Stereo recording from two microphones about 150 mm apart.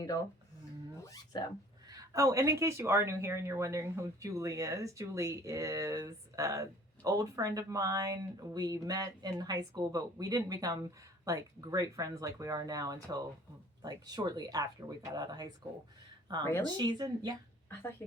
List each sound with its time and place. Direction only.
1.0 s speech: 25° left (ahead or behind)
1.9 s speech: 25° right (ahead or behind)
16.4 s speech: 15° left (ahead or behind)
16.6 s speech: 30° right (ahead or behind)